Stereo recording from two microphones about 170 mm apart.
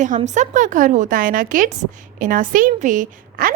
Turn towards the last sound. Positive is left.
turn(degrees=-50)  # may be behind; listen again after turning